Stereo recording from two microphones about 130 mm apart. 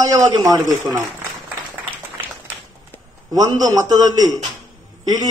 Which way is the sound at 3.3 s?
25° right (ahead or behind).